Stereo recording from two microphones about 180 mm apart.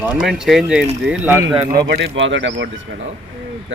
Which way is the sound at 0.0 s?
5° right (ahead or behind).